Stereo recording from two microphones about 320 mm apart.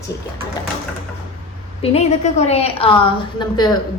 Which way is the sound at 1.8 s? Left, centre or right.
Centre.